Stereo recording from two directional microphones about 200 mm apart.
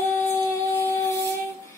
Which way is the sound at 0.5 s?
15° left (ahead or behind).